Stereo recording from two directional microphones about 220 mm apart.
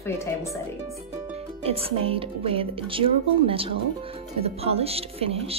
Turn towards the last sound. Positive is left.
turn(degrees=-25)  # may be behind; listen again after turning